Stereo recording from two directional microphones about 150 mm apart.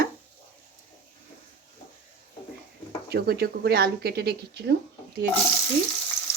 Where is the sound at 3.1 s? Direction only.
90° right.